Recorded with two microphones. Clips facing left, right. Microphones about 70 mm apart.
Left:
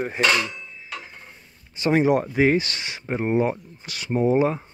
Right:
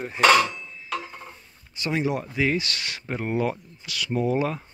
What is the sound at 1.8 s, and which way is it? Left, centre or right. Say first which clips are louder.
Speech: left 7 dB; left.